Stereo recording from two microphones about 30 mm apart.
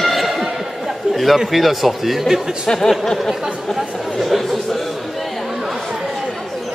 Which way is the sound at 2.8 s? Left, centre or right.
Centre.